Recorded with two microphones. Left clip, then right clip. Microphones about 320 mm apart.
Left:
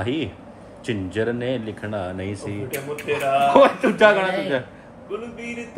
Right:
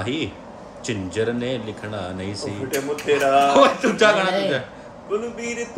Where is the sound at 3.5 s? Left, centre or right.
Left.